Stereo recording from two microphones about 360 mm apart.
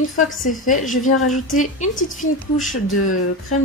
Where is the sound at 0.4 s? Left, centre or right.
Left.